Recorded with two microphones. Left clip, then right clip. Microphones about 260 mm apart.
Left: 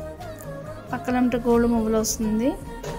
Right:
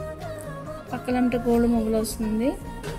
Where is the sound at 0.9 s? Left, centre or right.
Centre.